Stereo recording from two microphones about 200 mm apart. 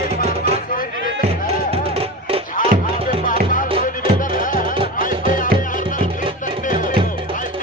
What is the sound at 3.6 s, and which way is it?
Music, 30° right (ahead or behind).